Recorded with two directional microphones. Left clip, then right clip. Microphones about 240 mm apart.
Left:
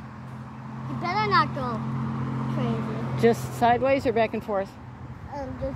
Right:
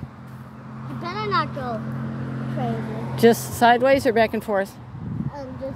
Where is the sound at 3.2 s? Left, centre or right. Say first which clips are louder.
Right 5 dB; right.